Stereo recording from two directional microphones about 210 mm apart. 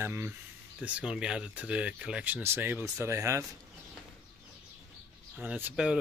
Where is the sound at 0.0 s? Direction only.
10° right (ahead or behind).